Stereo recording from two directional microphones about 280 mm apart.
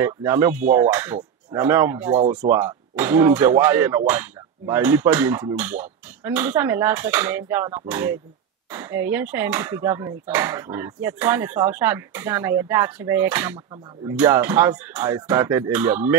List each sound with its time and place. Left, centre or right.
0.0 s speech: centre
2.1 s speech: right
2.5 s speech: centre